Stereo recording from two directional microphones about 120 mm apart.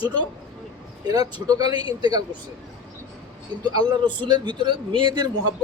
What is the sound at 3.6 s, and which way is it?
Speech, 35° right (ahead or behind).